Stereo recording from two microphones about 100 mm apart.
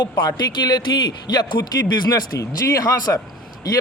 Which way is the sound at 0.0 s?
45° left (ahead or behind).